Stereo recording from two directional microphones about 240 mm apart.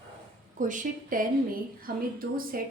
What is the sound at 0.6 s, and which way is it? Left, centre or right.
A woman's voice, right.